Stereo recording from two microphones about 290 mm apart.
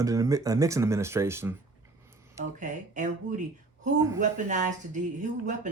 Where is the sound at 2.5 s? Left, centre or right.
Right.